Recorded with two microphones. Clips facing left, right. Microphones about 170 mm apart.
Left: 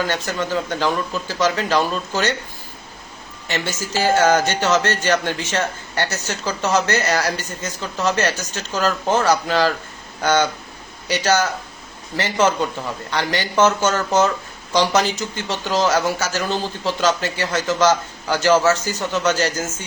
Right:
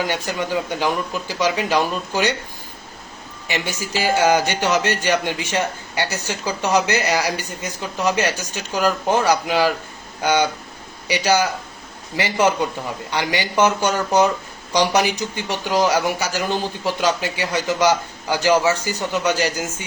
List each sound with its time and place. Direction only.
0.0 s a man's voice: 15° right (ahead or behind)
3.4 s a man's voice: 15° right (ahead or behind)